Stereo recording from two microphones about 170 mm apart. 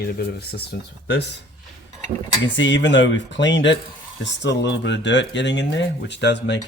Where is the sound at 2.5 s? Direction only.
90° left.